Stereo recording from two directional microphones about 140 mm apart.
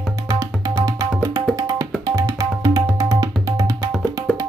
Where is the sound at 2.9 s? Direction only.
25° right (ahead or behind).